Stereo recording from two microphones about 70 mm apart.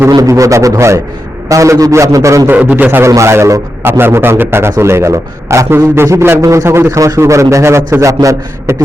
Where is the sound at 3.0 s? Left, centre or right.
Right.